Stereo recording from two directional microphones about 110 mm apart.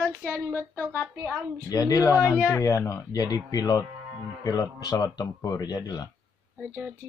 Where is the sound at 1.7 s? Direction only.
35° left (ahead or behind).